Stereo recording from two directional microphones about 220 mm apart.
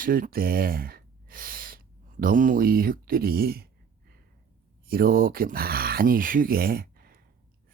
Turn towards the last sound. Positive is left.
turn(degrees=-45)  # may be behind; listen again after turning